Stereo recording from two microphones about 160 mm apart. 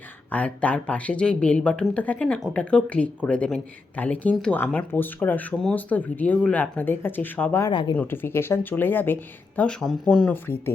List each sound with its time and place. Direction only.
0.3 s speech: 10° left (ahead or behind)
7.7 s speech: 30° left (ahead or behind)
7.9 s speech: 15° left (ahead or behind)